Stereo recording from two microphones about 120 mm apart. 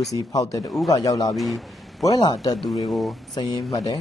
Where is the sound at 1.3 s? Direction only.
Centre (ahead or behind).